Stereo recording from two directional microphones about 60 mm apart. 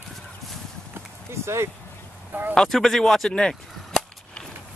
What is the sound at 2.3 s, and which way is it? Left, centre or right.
Speech, right.